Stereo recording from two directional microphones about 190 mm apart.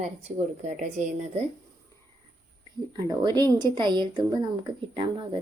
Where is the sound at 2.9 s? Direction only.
20° right (ahead or behind).